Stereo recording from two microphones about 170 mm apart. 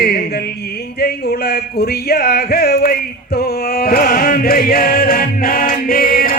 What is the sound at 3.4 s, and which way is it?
Chant, 65° left (ahead or behind).